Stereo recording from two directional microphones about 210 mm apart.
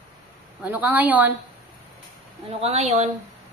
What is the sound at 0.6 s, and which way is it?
Speech, 5° right (ahead or behind).